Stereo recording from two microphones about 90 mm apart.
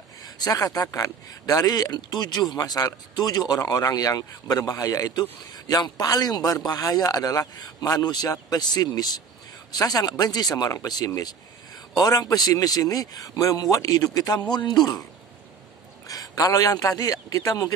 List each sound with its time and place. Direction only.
0.2 s a man's voice: 45° left (ahead or behind)
16.1 s a man's voice: 45° left (ahead or behind)